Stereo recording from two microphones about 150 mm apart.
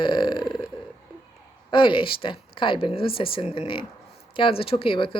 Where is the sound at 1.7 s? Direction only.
35° left (ahead or behind).